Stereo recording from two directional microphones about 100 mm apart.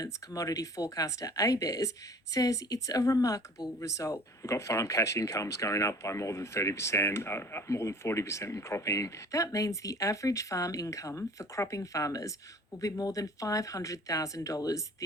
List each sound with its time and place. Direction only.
0.0 s speech: 35° left (ahead or behind)